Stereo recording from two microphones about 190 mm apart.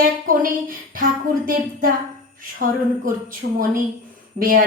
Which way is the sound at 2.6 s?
50° right (ahead or behind).